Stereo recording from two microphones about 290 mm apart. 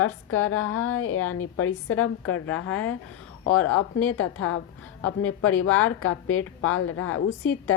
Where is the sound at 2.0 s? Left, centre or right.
Centre.